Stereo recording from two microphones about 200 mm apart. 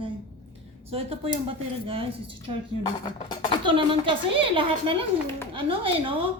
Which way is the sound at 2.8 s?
20° left (ahead or behind).